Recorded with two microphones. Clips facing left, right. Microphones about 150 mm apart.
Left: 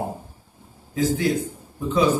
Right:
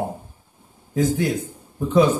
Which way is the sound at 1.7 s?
50° right (ahead or behind).